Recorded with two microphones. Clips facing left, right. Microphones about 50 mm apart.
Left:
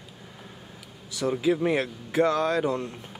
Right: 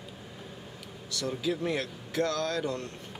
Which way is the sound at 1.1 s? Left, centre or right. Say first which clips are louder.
Left 7 dB; centre.